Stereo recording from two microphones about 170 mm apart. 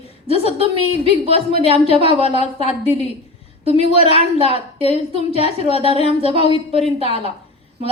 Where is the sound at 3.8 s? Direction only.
35° right (ahead or behind).